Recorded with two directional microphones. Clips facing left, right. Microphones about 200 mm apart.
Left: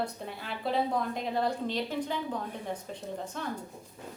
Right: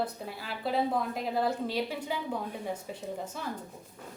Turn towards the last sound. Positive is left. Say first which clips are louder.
# even
turn(degrees=-5)  # may be behind; listen again after turning